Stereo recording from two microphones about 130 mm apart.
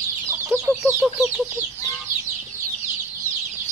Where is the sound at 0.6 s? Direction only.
20° right (ahead or behind).